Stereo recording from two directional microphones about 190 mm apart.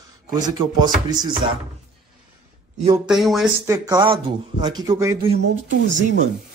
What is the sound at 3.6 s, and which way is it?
Speech, 15° right (ahead or behind).